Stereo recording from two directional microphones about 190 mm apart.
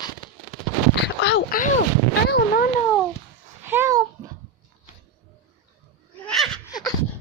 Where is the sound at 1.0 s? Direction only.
60° left (ahead or behind).